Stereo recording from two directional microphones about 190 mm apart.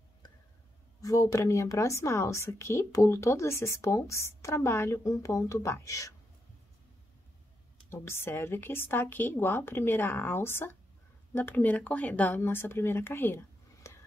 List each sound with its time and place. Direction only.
1.0 s a woman's voice: 15° left (ahead or behind)
7.9 s a woman's voice: 10° left (ahead or behind)
13.9 s a sound: 15° left (ahead or behind)